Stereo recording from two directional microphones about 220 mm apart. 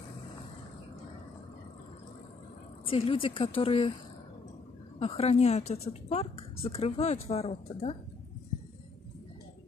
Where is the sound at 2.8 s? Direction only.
25° left (ahead or behind).